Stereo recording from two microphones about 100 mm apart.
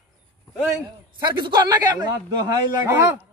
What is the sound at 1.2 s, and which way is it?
A man's voice, 50° right (ahead or behind).